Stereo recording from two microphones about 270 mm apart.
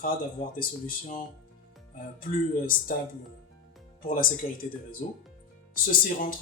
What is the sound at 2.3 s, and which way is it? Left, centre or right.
Speech, left.